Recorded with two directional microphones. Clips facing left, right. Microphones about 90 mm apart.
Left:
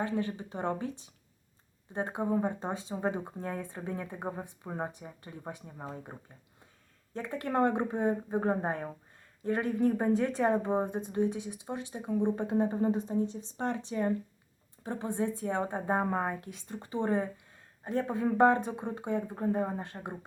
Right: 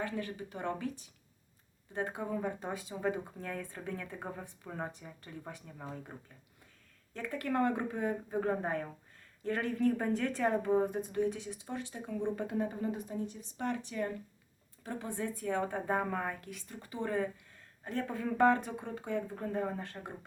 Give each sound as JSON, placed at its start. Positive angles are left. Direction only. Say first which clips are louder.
{"t": 0.0, "sound": "speech", "louder": "left 5 dB", "side_deg": 25}